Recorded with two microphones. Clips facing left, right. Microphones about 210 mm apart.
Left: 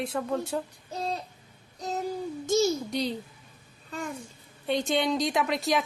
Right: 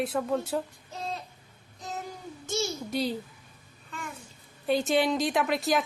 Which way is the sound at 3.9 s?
40° left (ahead or behind).